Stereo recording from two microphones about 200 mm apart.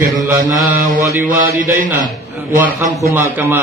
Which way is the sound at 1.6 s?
45° right (ahead or behind).